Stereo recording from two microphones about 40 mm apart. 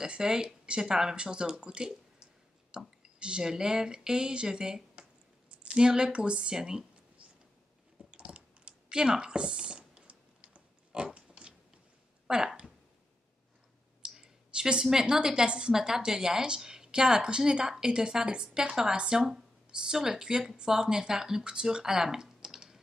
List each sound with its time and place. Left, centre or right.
0.0 s a woman's voice: centre
3.0 s a woman's voice: right
8.0 s a sound: right
12.3 s speech: centre
14.0 s a woman's voice: centre